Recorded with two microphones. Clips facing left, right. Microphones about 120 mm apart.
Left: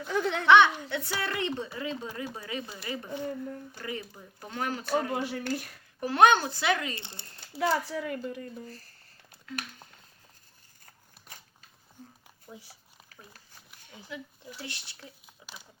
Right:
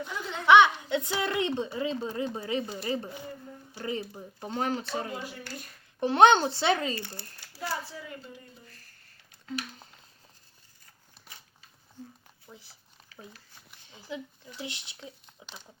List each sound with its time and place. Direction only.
0.1 s speech: 65° left (ahead or behind)
0.4 s a woman's voice: 15° right (ahead or behind)
4.9 s speech: 55° left (ahead or behind)
6.0 s a woman's voice: 25° right (ahead or behind)
6.9 s speech: 25° left (ahead or behind)
7.6 s speech: 75° left (ahead or behind)
8.6 s speech: 35° left (ahead or behind)
14.1 s a woman's voice: 25° right (ahead or behind)
15.4 s crumpling: 25° right (ahead or behind)